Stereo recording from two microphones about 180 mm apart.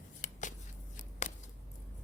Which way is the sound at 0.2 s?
45° left (ahead or behind).